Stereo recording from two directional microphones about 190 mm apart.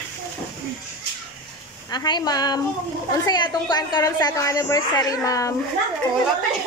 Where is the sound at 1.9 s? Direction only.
20° left (ahead or behind).